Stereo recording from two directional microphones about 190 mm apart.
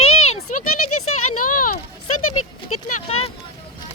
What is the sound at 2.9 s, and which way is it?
Speech, 30° left (ahead or behind).